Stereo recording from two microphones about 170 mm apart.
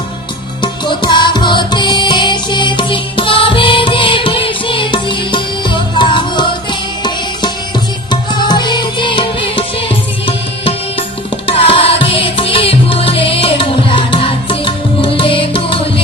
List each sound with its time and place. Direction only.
0.6 s music: 25° left (ahead or behind)